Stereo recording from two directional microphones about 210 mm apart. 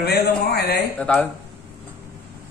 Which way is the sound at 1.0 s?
5° left (ahead or behind).